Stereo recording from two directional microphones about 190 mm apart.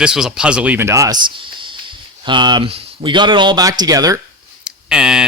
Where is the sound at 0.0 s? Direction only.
5° right (ahead or behind); by 4.2 s 20° right (ahead or behind).